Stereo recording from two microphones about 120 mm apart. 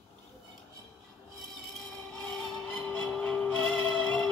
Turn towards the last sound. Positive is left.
turn(degrees=10)  # may be behind; listen again after turning